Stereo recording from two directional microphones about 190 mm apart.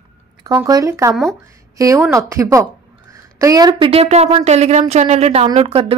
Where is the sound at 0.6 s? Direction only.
15° right (ahead or behind).